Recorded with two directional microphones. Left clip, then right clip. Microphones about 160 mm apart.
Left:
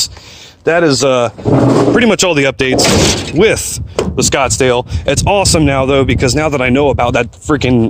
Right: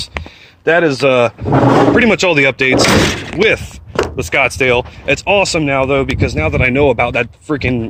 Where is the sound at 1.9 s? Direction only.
40° left (ahead or behind).